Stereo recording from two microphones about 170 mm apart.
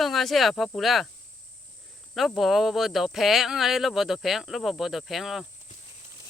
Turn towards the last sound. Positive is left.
turn(degrees=0)  # may be behind; listen again after turning